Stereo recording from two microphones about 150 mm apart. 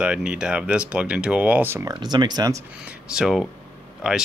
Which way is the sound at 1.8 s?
30° right (ahead or behind).